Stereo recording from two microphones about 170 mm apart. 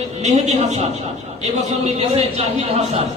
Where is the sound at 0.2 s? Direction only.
40° right (ahead or behind).